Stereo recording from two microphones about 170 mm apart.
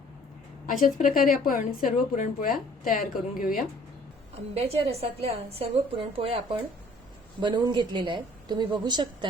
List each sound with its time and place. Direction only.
0.7 s a woman's voice: 50° left (ahead or behind)
4.5 s a woman's voice: 35° right (ahead or behind)